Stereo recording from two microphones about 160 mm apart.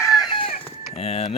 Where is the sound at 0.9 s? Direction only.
40° left (ahead or behind).